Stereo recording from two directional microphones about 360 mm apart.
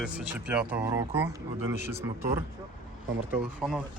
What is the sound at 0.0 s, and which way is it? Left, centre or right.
Speech, centre.